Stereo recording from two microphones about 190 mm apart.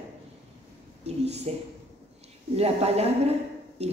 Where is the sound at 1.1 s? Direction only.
35° right (ahead or behind).